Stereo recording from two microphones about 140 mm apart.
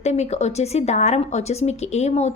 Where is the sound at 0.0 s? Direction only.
55° left (ahead or behind).